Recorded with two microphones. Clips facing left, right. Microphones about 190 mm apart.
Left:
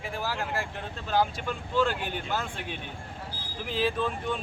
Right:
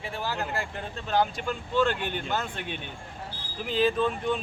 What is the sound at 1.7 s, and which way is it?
Speech, 5° left (ahead or behind).